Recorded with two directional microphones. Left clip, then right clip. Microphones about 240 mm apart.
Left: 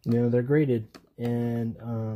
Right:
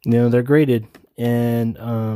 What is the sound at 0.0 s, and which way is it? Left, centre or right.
Speech, right.